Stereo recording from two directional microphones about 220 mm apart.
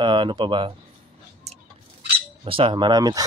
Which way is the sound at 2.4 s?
25° right (ahead or behind).